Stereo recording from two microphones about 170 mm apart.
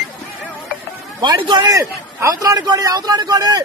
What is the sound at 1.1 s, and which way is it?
A man's voice, 25° right (ahead or behind).